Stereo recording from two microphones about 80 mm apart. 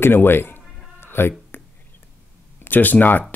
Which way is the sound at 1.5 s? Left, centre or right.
Left.